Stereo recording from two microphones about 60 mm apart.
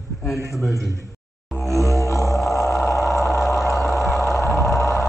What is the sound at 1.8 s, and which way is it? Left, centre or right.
Music, left.